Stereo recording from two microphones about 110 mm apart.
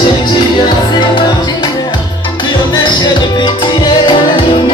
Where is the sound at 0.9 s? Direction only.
45° left (ahead or behind).